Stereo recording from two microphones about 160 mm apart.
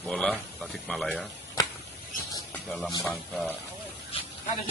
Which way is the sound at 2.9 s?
15° left (ahead or behind).